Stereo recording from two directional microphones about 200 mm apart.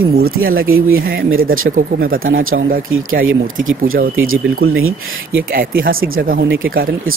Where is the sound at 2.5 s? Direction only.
85° right.